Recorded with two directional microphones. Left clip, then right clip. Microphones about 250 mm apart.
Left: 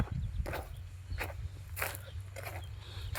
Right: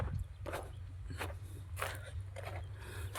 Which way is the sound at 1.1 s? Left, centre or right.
Right.